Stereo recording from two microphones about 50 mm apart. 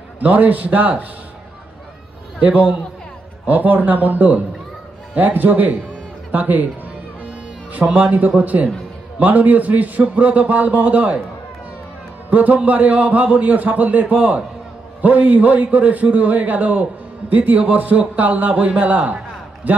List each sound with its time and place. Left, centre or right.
0.2 s a man's voice: right
2.4 s a man's voice: right
7.2 s music: right
8.4 s a man's voice: right
12.3 s a man's voice: right